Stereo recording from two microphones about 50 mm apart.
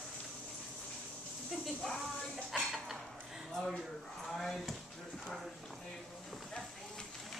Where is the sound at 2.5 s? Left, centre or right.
Centre.